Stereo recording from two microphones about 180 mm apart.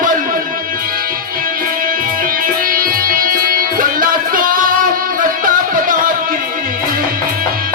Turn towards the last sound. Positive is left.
turn(degrees=-50)  # may be behind; listen again after turning